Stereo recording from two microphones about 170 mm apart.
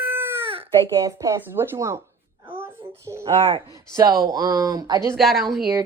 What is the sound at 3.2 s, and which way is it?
Speech, 30° right (ahead or behind).